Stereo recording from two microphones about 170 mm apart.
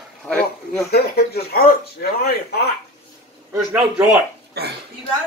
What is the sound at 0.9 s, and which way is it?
Speech, 65° left (ahead or behind).